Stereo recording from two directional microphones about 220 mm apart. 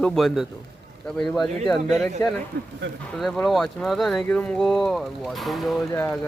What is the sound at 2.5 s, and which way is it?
Speech, 50° right (ahead or behind).